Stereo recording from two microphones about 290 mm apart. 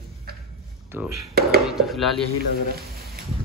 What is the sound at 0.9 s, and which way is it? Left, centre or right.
Speech, centre.